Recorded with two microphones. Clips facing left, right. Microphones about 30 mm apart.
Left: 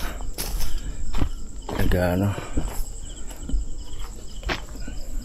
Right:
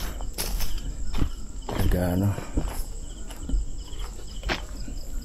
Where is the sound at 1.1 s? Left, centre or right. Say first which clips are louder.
Left 1 dB; centre.